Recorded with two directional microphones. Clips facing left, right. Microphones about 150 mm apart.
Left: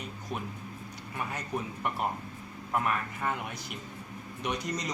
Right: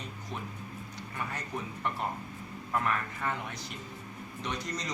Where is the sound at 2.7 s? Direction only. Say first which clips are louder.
Left 1 dB; 15° left (ahead or behind).